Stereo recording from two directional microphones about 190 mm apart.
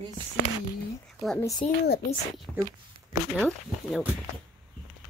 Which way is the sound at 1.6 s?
35° left (ahead or behind).